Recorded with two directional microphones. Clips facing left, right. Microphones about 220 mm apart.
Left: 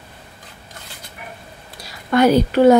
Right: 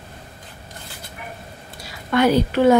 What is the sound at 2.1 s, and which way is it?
Speech, 40° left (ahead or behind).